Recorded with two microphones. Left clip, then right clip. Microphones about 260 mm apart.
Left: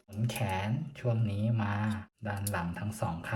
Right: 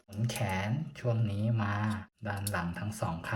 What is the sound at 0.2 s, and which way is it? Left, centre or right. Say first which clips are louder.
Speech: even; centre.